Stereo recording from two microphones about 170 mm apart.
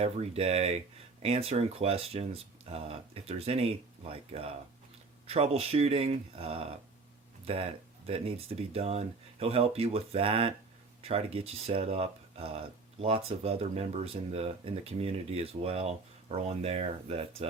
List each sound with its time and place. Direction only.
0.0 s speech: 35° right (ahead or behind)